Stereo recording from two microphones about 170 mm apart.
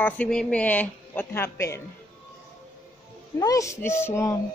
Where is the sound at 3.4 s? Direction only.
20° left (ahead or behind).